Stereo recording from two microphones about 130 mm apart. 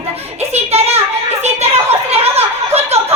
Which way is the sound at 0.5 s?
55° right (ahead or behind).